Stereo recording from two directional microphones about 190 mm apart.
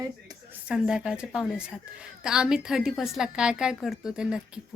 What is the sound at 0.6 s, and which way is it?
A woman's voice, 5° right (ahead or behind).